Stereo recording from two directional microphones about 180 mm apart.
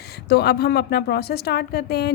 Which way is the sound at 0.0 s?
65° left (ahead or behind).